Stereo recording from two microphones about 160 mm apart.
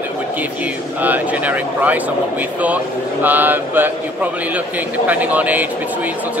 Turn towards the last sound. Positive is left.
turn(degrees=-10)  # may be behind; listen again after turning